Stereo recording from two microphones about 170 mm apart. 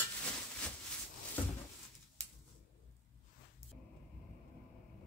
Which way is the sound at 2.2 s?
40° right (ahead or behind).